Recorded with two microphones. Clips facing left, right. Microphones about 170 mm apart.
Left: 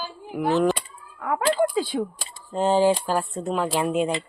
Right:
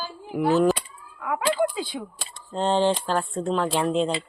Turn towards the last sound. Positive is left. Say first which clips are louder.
# even
turn(degrees=5)  # may be behind; listen again after turning